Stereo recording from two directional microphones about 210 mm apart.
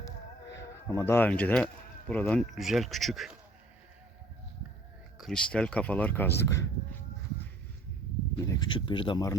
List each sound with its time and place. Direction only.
0.5 s speech: 15° left (ahead or behind)
5.1 s speech: centre (ahead or behind)
8.4 s speech: 20° left (ahead or behind)